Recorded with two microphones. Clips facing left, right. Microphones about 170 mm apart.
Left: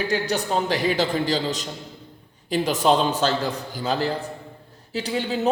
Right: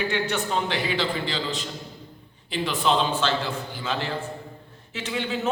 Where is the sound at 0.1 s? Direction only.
40° left (ahead or behind).